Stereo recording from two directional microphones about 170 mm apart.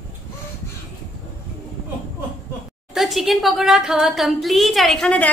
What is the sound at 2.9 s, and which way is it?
A woman's voice, centre (ahead or behind).